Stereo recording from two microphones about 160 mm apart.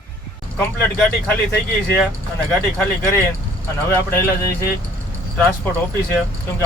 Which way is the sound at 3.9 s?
15° left (ahead or behind).